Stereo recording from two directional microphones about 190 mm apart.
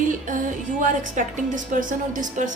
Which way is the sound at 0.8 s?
45° right (ahead or behind).